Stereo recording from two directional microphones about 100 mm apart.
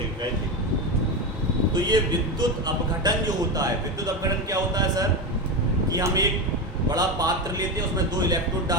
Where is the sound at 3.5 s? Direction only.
35° right (ahead or behind).